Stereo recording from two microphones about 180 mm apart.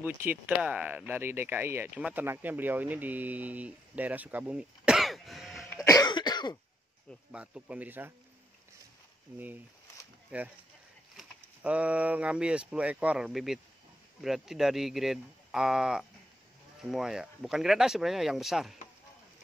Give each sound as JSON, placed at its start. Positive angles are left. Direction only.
{"t": 0.0, "sound": "speech", "side_deg": -10}
{"t": 5.9, "sound": "cough", "side_deg": 20}
{"t": 7.3, "sound": "speech", "side_deg": -5}
{"t": 10.3, "sound": "speech", "side_deg": -5}